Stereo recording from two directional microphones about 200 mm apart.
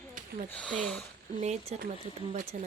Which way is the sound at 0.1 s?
40° right (ahead or behind).